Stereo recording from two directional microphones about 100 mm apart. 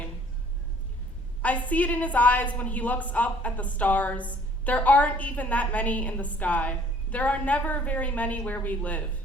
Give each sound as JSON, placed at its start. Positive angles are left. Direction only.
{"t": 1.4, "sound": "a woman's voice", "side_deg": 15}